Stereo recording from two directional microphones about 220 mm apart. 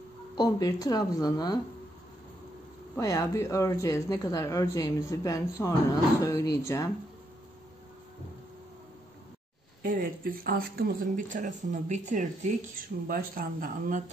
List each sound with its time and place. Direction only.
0.4 s speech: 15° left (ahead or behind)
3.0 s speech: 15° left (ahead or behind)
9.8 s speech: 40° right (ahead or behind)